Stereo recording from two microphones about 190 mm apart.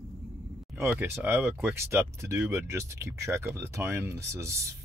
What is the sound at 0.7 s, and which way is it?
Speech, 10° right (ahead or behind).